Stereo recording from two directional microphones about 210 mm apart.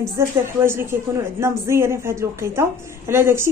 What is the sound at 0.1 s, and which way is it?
A woman's voice, 10° right (ahead or behind).